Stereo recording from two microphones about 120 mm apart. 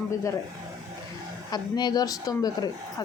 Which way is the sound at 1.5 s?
35° left (ahead or behind).